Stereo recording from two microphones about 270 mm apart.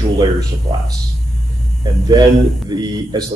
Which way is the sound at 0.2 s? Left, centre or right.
Centre.